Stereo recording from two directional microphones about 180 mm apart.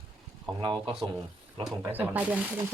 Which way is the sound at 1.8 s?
10° right (ahead or behind).